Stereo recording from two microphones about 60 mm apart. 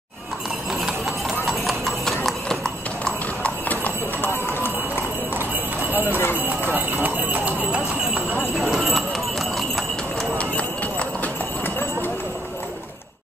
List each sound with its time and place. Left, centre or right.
0.7 s clip-clop: centre
3.8 s clip-clop: left
6.0 s clip-clop: left
6.4 s clip-clop: right
8.5 s clip-clop: centre
10.3 s clip-clop: left